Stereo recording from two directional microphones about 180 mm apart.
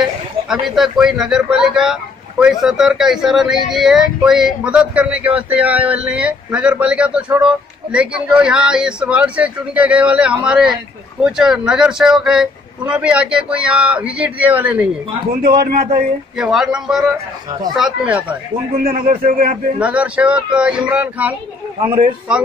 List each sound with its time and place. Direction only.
0.7 s speech: centre (ahead or behind)
15.4 s a man's voice: 60° right (ahead or behind)
16.3 s speech: 5° right (ahead or behind)
18.9 s a man's voice: 50° right (ahead or behind)
19.8 s speech: 5° right (ahead or behind)
21.8 s speech: 30° right (ahead or behind)